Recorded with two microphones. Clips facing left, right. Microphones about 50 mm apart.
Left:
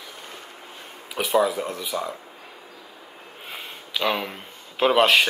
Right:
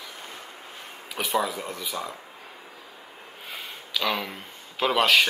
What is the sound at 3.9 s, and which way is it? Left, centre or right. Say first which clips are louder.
Speech: left 3 dB; left.